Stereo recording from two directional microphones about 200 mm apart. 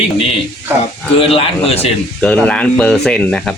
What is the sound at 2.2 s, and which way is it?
Speech, 5° left (ahead or behind).